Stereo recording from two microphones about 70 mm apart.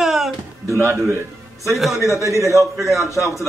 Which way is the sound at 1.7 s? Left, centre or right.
Centre.